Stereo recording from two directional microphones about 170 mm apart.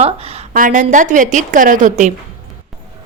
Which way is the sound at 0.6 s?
50° right (ahead or behind).